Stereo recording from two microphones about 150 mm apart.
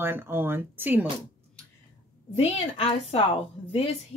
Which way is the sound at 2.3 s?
40° left (ahead or behind).